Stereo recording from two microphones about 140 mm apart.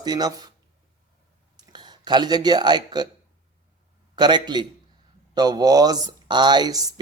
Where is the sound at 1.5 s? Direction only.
30° right (ahead or behind).